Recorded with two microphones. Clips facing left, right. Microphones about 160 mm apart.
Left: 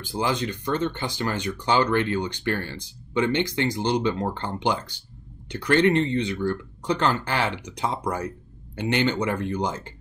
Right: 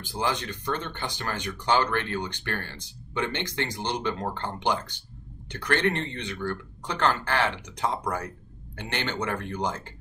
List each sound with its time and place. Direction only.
0.1 s speech: 15° left (ahead or behind)
8.7 s speech: 10° left (ahead or behind)